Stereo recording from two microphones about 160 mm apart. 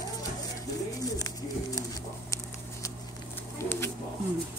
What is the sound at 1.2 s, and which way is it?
Bird, 20° left (ahead or behind).